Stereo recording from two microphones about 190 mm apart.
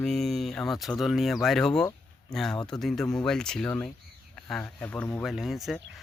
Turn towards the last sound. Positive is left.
turn(degrees=0)  # may be behind; listen again after turning